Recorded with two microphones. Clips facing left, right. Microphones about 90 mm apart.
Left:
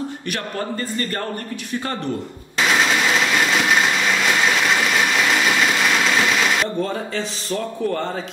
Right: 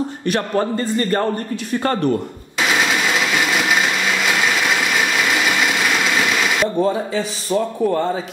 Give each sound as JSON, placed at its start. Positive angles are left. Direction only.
{"t": 0.3, "sound": "a man's voice", "side_deg": -30}
{"t": 6.6, "sound": "speech", "side_deg": -10}